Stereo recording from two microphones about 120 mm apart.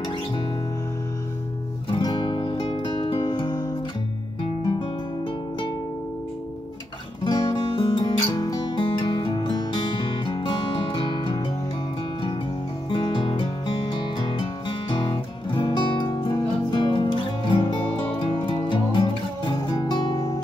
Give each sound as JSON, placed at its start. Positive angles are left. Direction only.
{"t": 2.0, "sound": "music", "side_deg": 40}
{"t": 7.4, "sound": "music", "side_deg": 50}
{"t": 12.9, "sound": "music", "side_deg": 45}